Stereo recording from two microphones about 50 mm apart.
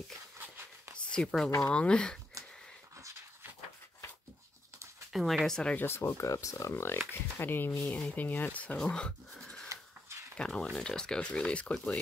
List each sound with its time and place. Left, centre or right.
0.4 s a sound: right
0.9 s a sound: centre
1.6 s speech: left
5.1 s speech: centre
5.8 s speech: left
7.1 s speech: left
8.7 s speech: centre